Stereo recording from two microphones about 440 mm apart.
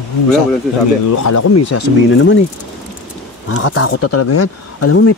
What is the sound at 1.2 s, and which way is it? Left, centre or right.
Speech, left.